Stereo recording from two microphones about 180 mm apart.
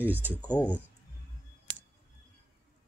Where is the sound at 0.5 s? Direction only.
10° left (ahead or behind).